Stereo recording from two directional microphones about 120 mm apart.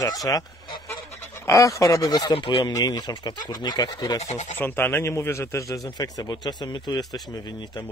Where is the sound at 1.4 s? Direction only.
25° left (ahead or behind).